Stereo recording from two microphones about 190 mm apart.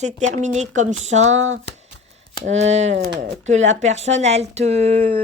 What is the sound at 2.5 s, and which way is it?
Speech, 35° right (ahead or behind).